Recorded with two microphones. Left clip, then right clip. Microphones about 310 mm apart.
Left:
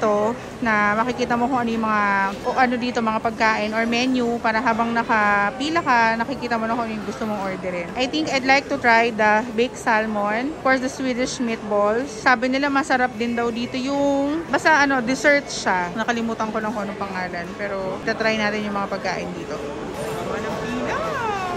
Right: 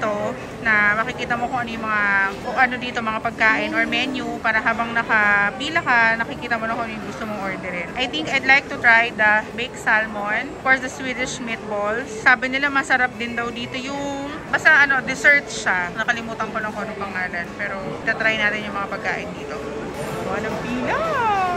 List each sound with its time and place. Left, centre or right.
0.7 s speech: centre
8.0 s a woman's voice: centre
18.0 s a woman's voice: centre
20.8 s music: centre